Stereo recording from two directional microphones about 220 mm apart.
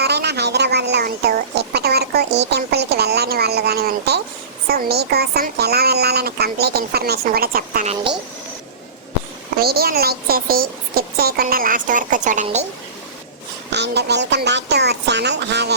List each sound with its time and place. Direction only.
0.0 s a sound: 50° right (ahead or behind)
4.7 s a woman's voice: 45° right (ahead or behind)
9.6 s speech: 45° right (ahead or behind)
13.7 s a woman's voice: 50° right (ahead or behind)